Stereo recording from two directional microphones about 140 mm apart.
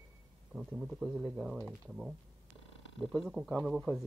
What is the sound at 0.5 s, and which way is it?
Speech, 5° right (ahead or behind).